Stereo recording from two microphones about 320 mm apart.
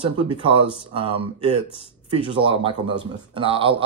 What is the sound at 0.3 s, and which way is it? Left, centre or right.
A man's voice, centre.